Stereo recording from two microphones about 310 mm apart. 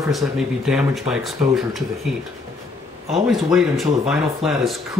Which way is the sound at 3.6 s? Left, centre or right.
Centre.